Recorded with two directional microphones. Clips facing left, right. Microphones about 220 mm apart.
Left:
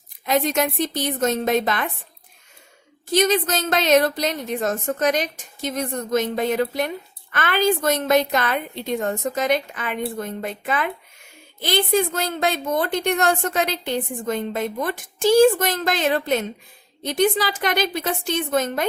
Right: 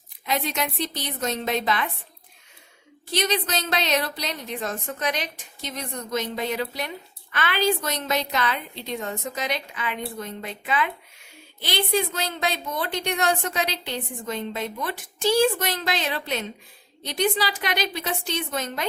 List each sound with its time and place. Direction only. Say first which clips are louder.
0.3 s a woman's voice: left 7 dB; 45° left (ahead or behind)
3.1 s a woman's voice: left 6 dB; 45° left (ahead or behind)